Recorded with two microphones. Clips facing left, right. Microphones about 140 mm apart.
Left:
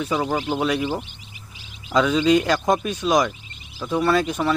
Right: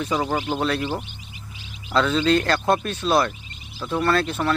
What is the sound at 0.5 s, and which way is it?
Speech, 10° left (ahead or behind).